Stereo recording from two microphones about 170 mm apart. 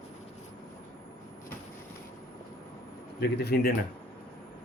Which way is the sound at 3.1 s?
75° left (ahead or behind).